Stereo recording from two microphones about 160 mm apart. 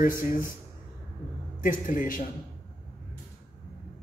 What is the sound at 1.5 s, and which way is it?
Speech, 55° left (ahead or behind).